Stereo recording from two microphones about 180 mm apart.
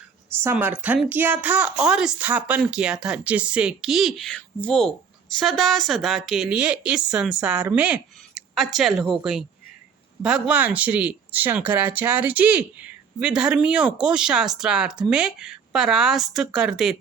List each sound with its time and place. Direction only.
0.4 s a woman's voice: 10° right (ahead or behind)